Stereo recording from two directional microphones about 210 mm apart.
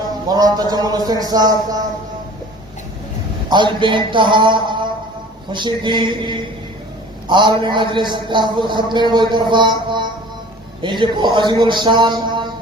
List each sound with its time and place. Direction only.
0.3 s speech: 20° right (ahead or behind)
3.5 s a man's voice: 20° right (ahead or behind)
9.5 s mantra: 20° right (ahead or behind)
10.8 s a man's voice: 20° right (ahead or behind)